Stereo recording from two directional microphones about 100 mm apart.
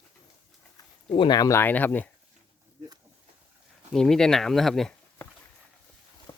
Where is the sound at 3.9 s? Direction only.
5° left (ahead or behind).